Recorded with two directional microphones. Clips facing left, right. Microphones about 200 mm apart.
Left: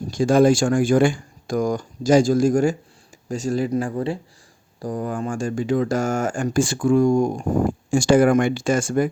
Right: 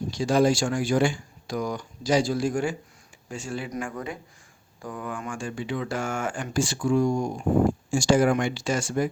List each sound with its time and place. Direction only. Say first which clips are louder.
0.1 s speech: left 6 dB; 50° left (ahead or behind)